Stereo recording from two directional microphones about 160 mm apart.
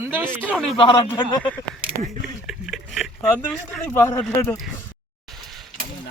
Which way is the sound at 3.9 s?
15° left (ahead or behind).